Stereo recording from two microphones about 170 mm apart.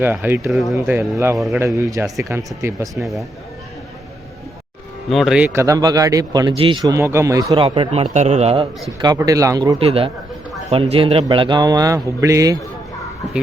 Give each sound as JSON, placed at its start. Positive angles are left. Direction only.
{"t": 0.0, "sound": "speech", "side_deg": -10}
{"t": 2.9, "sound": "speech", "side_deg": 0}
{"t": 5.0, "sound": "speech", "side_deg": 0}
{"t": 5.5, "sound": "speech", "side_deg": -20}
{"t": 7.5, "sound": "a man's voice", "side_deg": -30}
{"t": 9.0, "sound": "speech", "side_deg": -20}
{"t": 9.7, "sound": "a man's voice", "side_deg": -35}